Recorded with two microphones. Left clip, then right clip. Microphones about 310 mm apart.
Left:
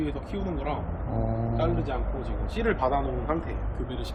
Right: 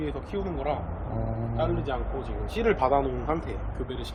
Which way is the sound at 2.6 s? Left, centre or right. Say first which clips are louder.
Right 3 dB; right.